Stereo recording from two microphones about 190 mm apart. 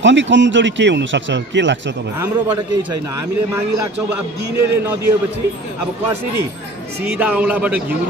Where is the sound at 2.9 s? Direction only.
15° right (ahead or behind).